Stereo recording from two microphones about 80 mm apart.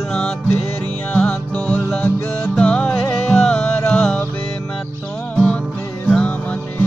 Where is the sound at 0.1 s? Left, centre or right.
Centre.